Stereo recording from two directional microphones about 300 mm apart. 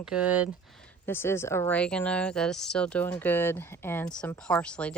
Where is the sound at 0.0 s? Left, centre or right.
Centre.